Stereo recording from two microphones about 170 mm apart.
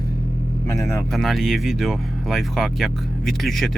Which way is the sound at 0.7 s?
15° left (ahead or behind).